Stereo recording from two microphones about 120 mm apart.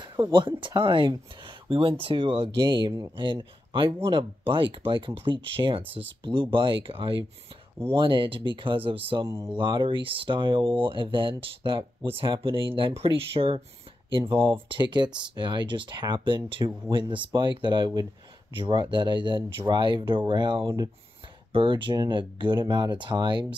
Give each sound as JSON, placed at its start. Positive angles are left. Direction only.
{"t": 0.0, "sound": "speech", "side_deg": -40}
{"t": 21.5, "sound": "speech", "side_deg": -45}